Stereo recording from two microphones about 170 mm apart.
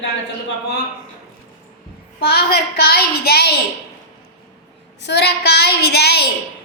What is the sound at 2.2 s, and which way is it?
A child's voice, 70° left (ahead or behind).